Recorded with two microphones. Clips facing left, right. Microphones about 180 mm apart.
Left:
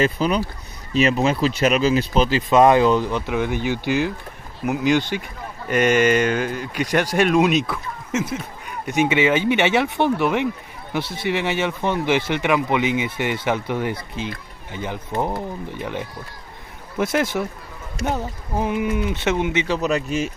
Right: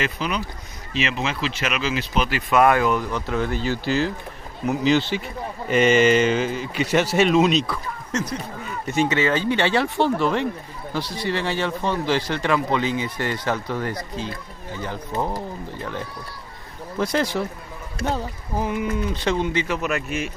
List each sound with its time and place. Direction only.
0.0 s speech: 35° left (ahead or behind); by 3.5 s 15° left (ahead or behind)
3.5 s speech: 60° left (ahead or behind)
4.6 s speech: 10° left (ahead or behind)
8.9 s speech: 15° left (ahead or behind)
17.3 s speech: 5° left (ahead or behind)
18.0 s speech: 20° left (ahead or behind)
19.8 s speech: 35° left (ahead or behind)